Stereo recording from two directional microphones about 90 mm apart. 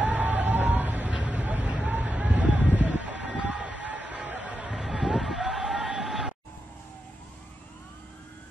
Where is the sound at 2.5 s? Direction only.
20° right (ahead or behind).